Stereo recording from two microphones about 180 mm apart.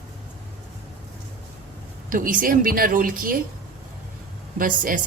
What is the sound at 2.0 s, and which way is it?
A woman's voice, 50° right (ahead or behind).